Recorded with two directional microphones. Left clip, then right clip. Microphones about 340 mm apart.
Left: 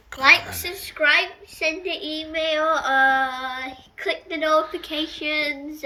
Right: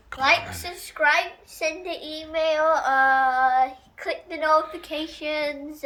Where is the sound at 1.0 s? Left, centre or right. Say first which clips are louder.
Left 2 dB; right.